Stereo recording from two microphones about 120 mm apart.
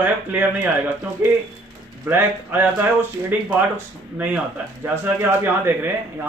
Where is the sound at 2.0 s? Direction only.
15° right (ahead or behind).